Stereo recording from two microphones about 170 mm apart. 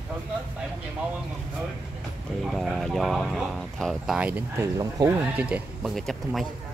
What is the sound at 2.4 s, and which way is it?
Speech, centre (ahead or behind).